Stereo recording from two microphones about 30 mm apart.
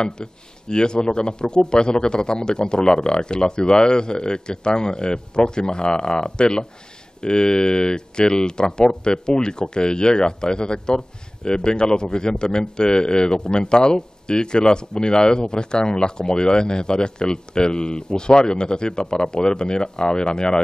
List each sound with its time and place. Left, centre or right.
0.0 s speech: left